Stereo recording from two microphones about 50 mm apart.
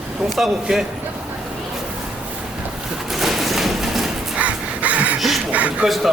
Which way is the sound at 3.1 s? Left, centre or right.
Centre.